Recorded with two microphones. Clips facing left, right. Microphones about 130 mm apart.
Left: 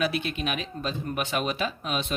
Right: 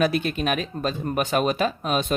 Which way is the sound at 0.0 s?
45° right (ahead or behind).